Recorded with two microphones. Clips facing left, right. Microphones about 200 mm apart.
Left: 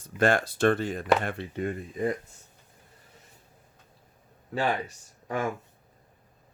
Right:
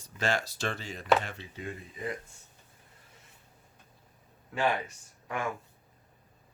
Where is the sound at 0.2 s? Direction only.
55° left (ahead or behind).